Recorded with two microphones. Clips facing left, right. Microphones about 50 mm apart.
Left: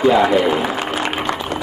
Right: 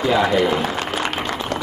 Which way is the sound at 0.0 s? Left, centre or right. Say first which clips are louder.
Left 4 dB; centre.